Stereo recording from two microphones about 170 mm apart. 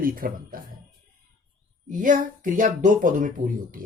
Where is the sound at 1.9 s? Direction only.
50° right (ahead or behind).